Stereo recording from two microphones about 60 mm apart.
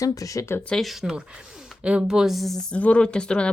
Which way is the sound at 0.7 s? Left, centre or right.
Centre.